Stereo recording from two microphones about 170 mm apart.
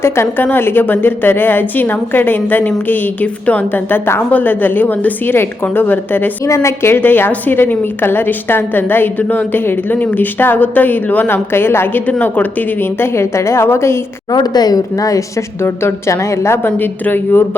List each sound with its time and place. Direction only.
0.0 s a woman's voice: 15° left (ahead or behind)